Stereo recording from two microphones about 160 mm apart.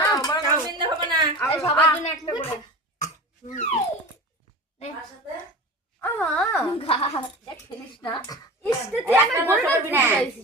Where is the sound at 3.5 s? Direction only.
45° left (ahead or behind).